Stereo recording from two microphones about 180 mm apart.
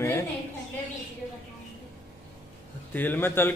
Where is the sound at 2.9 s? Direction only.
10° left (ahead or behind).